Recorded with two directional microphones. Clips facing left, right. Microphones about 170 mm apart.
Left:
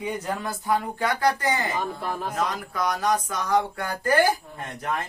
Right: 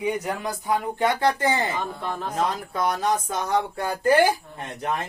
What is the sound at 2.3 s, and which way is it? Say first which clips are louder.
Speech: right 2 dB; 30° right (ahead or behind).